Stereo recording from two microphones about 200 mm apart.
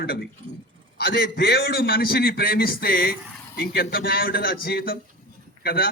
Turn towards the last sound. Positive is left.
turn(degrees=50)  # may be behind; listen again after turning